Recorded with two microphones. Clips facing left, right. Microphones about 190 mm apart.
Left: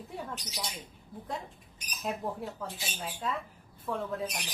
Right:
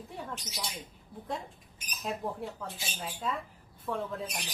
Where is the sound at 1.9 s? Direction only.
Centre (ahead or behind).